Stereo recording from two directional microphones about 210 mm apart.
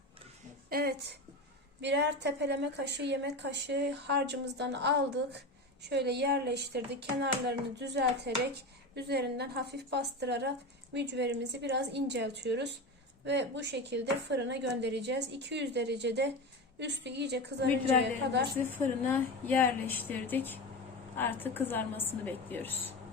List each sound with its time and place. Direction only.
0.7 s a woman's voice: 45° right (ahead or behind)
18.6 s a woman's voice: 10° left (ahead or behind)